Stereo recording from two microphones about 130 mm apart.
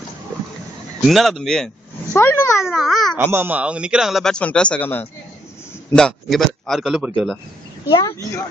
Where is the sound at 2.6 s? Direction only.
Centre (ahead or behind).